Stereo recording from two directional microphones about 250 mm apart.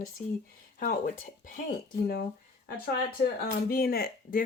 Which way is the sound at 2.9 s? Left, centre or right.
Left.